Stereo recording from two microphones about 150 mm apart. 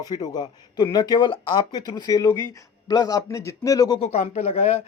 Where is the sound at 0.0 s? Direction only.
25° left (ahead or behind).